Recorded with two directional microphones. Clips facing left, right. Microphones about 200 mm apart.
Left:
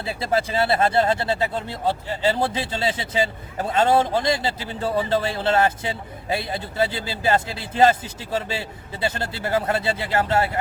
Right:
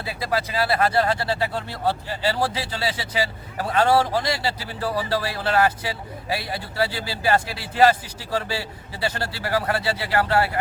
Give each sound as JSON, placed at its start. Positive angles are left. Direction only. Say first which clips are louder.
{"t": 0.0, "sound": "speech", "louder": "left 3 dB", "side_deg": 25}